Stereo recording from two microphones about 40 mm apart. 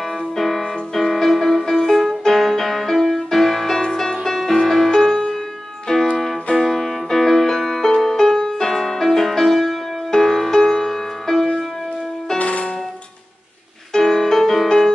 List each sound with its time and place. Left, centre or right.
0.2 s music: centre
12.4 s music: left
13.9 s music: centre